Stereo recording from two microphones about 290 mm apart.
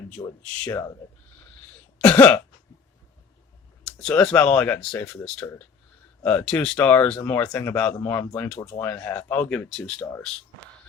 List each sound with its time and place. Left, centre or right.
0.2 s speech: centre
2.0 s speech: centre
3.8 s speech: centre